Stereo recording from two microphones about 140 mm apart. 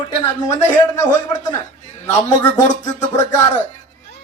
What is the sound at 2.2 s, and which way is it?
Music, 30° left (ahead or behind).